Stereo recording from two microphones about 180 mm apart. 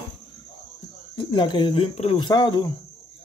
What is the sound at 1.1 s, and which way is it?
Speech, 25° left (ahead or behind).